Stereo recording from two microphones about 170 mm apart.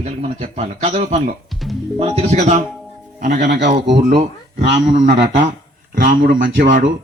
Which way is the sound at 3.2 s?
70° right (ahead or behind).